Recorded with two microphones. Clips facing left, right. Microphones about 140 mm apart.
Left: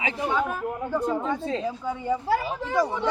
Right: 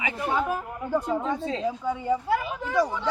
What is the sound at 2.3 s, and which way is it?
Speech, 35° left (ahead or behind).